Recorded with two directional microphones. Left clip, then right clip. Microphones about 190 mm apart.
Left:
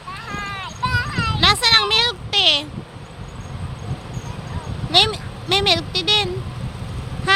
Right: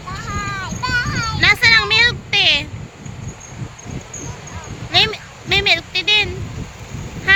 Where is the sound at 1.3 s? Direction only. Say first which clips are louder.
Right 3 dB; 20° left (ahead or behind).